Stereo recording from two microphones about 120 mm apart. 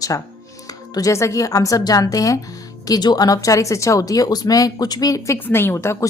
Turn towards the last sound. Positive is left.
turn(degrees=25)  # may be behind; listen again after turning